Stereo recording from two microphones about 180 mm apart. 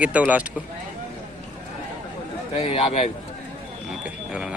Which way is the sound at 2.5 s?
35° left (ahead or behind).